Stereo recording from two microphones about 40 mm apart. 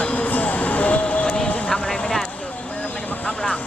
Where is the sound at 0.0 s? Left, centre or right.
Left.